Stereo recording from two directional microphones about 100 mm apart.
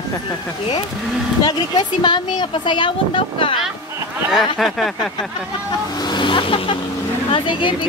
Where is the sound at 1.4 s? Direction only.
45° left (ahead or behind).